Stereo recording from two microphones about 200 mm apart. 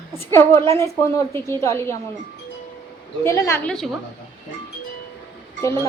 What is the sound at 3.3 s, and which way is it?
Speech, 15° left (ahead or behind).